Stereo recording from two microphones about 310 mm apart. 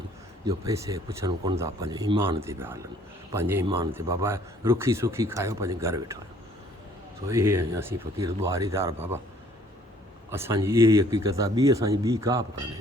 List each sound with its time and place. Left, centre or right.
0.4 s speech: centre
7.3 s speech: centre
10.3 s speech: centre